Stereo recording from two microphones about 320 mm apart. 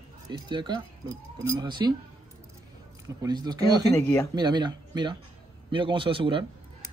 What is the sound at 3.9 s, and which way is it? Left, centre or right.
Speech, centre.